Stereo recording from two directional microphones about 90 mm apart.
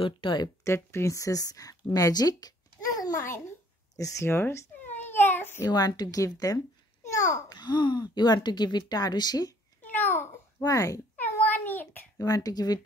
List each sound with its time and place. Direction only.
0.0 s speech: 60° left (ahead or behind)
0.7 s speech: 30° left (ahead or behind)
3.2 s speech: 30° left (ahead or behind)
4.3 s babbling: 25° left (ahead or behind)
5.7 s a child's voice: 50° left (ahead or behind)
9.8 s babbling: 20° left (ahead or behind)
10.6 s speech: 40° left (ahead or behind)
11.1 s a sound: 20° left (ahead or behind)
12.2 s a child's voice: 40° left (ahead or behind)